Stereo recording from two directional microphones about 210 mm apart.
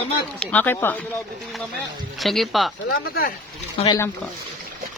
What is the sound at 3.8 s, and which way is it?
Speech, 30° left (ahead or behind).